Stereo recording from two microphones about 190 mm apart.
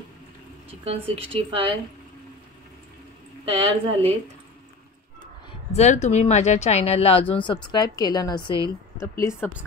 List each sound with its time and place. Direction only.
0.8 s speech: 30° right (ahead or behind)
3.4 s a woman's voice: 30° right (ahead or behind)
5.2 s a woman's voice: 35° left (ahead or behind)